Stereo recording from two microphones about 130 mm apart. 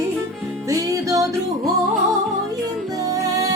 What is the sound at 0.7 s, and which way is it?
Music, 25° right (ahead or behind).